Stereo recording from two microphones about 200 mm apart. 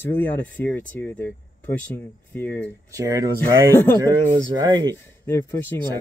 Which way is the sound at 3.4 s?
10° left (ahead or behind).